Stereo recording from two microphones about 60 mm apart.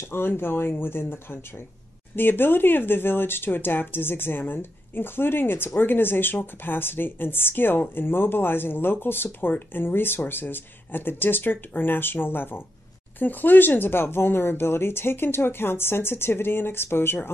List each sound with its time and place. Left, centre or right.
0.1 s speech: left